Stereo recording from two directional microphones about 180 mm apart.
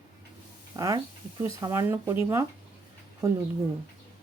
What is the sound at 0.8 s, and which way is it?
A woman's voice, 20° right (ahead or behind).